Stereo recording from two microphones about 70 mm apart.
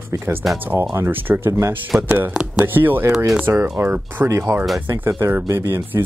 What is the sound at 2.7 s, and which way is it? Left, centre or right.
Speech, right.